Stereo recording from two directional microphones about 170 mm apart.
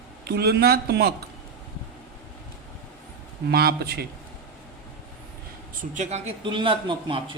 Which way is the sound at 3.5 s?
65° right (ahead or behind).